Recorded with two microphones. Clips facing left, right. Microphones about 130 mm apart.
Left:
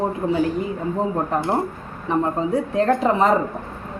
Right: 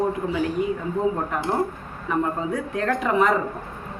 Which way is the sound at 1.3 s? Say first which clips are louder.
Left 2 dB; 30° left (ahead or behind).